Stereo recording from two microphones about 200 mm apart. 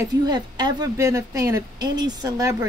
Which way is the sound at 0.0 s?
20° right (ahead or behind).